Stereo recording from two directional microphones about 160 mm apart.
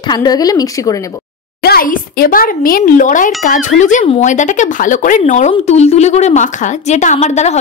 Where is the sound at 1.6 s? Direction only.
70° left (ahead or behind).